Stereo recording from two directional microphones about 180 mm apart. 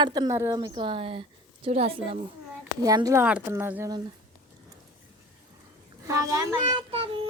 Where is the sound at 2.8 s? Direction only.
20° right (ahead or behind).